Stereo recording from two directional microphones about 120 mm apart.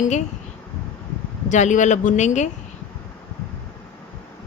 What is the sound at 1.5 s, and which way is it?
Speech, 85° left.